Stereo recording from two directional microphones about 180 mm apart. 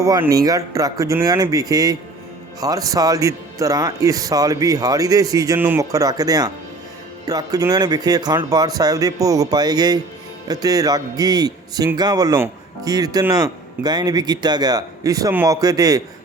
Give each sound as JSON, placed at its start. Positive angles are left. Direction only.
{"t": 0.0, "sound": "a man's voice", "side_deg": -20}